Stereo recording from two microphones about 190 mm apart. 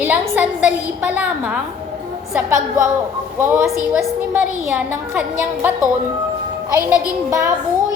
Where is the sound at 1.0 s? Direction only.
5° right (ahead or behind).